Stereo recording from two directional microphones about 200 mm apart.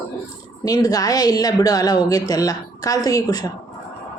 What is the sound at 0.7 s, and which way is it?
A woman's voice, 20° left (ahead or behind).